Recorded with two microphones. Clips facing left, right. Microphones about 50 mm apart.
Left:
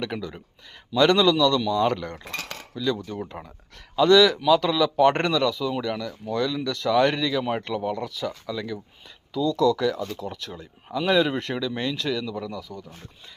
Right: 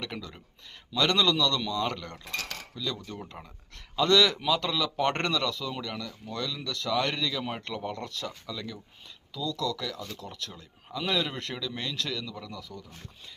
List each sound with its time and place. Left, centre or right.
0.0 s speech: centre
2.1 s speech: left
2.7 s speech: centre
3.4 s speech: left
3.9 s speech: centre
9.3 s speech: left
12.5 s speech: centre